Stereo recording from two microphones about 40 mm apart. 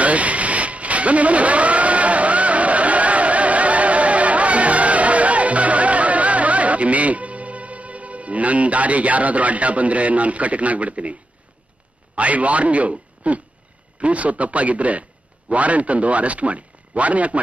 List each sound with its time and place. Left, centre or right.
0.0 s vehicle: right
12.2 s a man's voice: right